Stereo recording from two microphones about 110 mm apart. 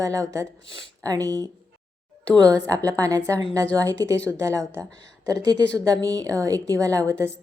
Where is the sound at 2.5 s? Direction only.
35° right (ahead or behind).